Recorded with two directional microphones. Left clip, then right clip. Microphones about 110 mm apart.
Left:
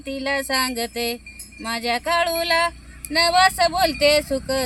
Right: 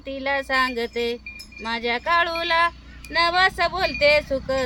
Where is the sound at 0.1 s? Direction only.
20° right (ahead or behind).